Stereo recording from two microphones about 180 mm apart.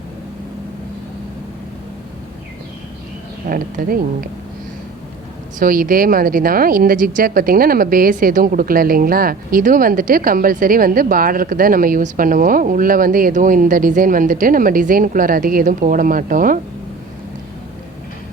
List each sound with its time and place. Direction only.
3.5 s a woman's voice: 50° right (ahead or behind)
5.5 s a woman's voice: 50° right (ahead or behind)